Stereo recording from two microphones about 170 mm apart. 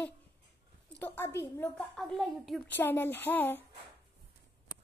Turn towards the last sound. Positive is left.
turn(degrees=10)  # may be behind; listen again after turning